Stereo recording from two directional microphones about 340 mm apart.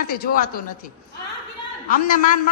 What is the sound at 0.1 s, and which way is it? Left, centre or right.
Speech, left.